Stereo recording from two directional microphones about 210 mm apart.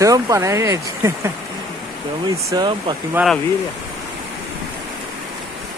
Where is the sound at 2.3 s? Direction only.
15° right (ahead or behind).